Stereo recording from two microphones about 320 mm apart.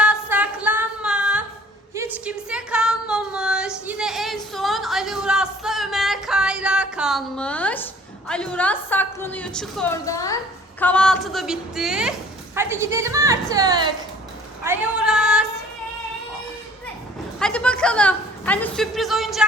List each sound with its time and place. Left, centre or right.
0.0 s a sound: centre
2.0 s female singing: centre
8.3 s a woman's voice: centre
14.6 s female singing: centre
17.4 s a woman's voice: centre